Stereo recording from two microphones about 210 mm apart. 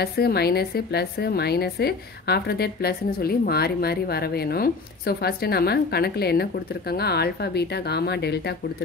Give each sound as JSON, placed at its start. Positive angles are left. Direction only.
{"t": 0.0, "sound": "a woman's voice", "side_deg": 50}